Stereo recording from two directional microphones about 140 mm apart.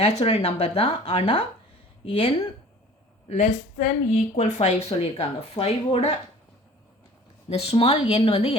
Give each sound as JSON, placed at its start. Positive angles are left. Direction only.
{"t": 0.0, "sound": "speech", "side_deg": 50}
{"t": 7.5, "sound": "speech", "side_deg": 45}